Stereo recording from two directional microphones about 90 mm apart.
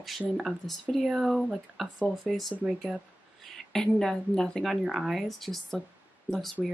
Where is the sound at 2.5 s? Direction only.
15° right (ahead or behind).